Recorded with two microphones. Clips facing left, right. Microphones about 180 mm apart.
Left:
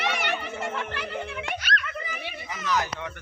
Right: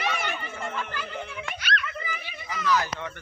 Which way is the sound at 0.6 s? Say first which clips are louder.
Left 2 dB; 70° left (ahead or behind).